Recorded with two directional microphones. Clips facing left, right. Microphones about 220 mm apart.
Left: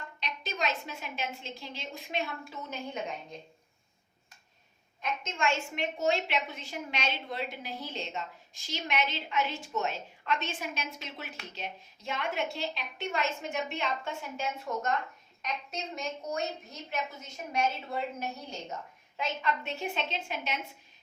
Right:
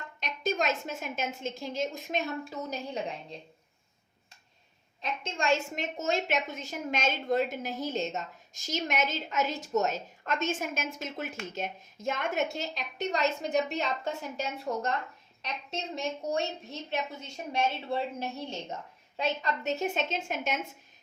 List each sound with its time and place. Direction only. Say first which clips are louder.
0.2 s a woman's voice: right 5 dB; 45° right (ahead or behind)
5.2 s a woman's voice: right 4 dB; 35° right (ahead or behind)